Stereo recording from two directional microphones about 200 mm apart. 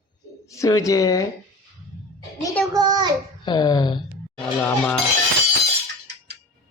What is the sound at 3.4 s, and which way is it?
Speech, 20° left (ahead or behind).